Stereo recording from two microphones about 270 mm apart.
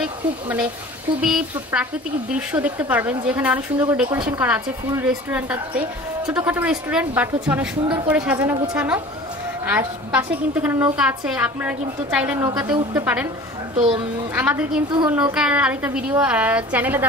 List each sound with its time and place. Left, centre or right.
1.2 s a woman's voice: centre
13.7 s a child's voice: centre
14.3 s a woman's voice: centre